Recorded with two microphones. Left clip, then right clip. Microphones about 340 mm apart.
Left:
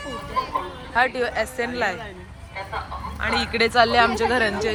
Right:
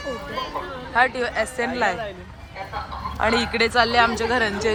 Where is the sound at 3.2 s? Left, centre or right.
Centre.